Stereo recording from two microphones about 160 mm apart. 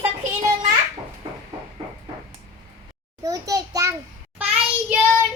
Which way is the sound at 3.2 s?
20° right (ahead or behind).